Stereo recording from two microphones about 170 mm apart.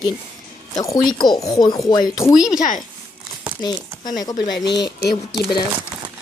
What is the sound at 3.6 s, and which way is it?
Speech, 25° left (ahead or behind).